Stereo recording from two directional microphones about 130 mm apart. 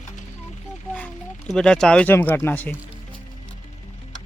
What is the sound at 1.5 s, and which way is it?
Speech, 5° left (ahead or behind).